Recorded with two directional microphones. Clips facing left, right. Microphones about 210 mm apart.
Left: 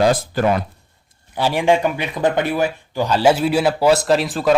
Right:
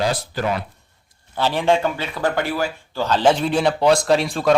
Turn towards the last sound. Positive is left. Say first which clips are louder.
# left 1 dB
turn(degrees=0)  # may be behind; listen again after turning